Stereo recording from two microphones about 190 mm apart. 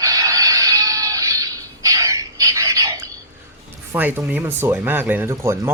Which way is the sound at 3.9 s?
10° right (ahead or behind).